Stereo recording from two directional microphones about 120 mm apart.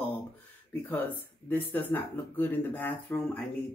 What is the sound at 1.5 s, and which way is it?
Speech, 15° left (ahead or behind).